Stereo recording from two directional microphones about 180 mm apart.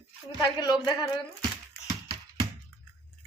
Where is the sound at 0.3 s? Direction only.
20° left (ahead or behind).